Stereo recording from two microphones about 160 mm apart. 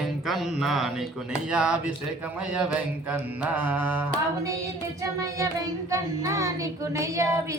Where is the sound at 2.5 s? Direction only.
5° right (ahead or behind).